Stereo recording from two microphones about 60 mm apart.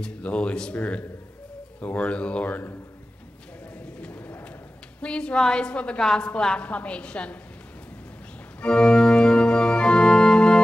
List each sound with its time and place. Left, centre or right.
0.0 s speech: centre
4.0 s a sound: left
5.0 s a woman's voice: centre
8.5 s organ: centre